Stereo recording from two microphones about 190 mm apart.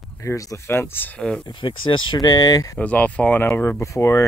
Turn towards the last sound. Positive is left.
turn(degrees=15)  # may be behind; listen again after turning